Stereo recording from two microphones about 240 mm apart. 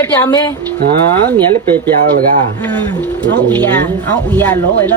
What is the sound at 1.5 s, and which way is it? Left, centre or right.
Speech, centre.